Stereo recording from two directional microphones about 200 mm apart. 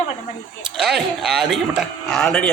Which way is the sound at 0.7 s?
Centre (ahead or behind).